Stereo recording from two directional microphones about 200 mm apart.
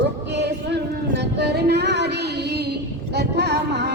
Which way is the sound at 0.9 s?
55° right (ahead or behind).